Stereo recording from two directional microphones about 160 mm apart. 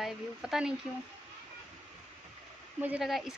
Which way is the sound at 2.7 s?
10° right (ahead or behind).